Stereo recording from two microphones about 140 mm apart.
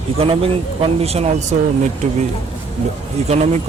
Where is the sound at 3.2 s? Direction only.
55° right (ahead or behind).